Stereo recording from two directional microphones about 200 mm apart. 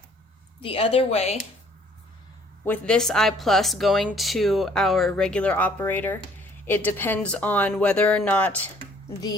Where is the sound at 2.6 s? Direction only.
5° left (ahead or behind).